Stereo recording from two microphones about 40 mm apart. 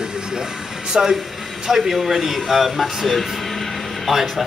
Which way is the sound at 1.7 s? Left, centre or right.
Centre.